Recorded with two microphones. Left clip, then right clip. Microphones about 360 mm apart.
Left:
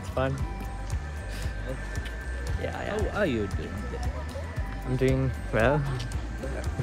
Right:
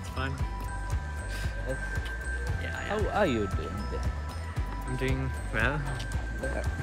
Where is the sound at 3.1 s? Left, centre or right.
Right.